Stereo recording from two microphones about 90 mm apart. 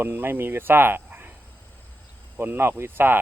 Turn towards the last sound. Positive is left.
turn(degrees=-25)  # may be behind; listen again after turning